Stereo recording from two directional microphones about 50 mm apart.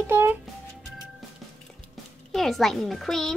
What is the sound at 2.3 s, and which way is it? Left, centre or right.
A child's voice, centre.